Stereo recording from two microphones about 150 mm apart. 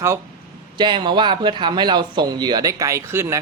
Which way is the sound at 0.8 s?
30° right (ahead or behind).